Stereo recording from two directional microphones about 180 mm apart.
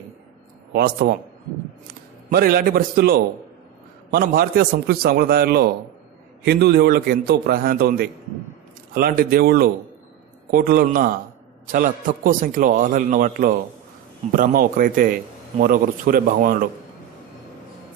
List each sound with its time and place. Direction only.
0.7 s a man's voice: 60° right (ahead or behind)
2.2 s a man's voice: 55° right (ahead or behind)